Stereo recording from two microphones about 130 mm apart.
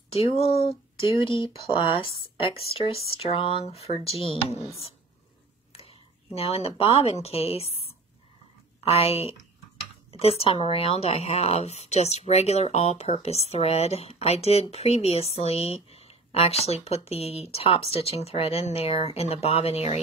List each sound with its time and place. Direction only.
0.1 s speech: 50° left (ahead or behind)
6.3 s speech: 50° left (ahead or behind)